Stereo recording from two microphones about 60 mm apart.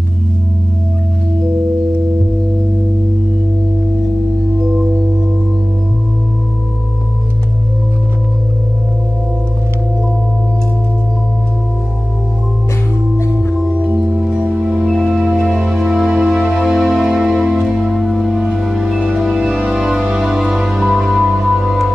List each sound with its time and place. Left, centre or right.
13.7 s music: right
14.0 s music: centre